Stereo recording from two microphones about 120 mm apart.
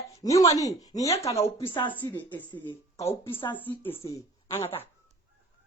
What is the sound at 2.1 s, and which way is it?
Speech, 40° left (ahead or behind).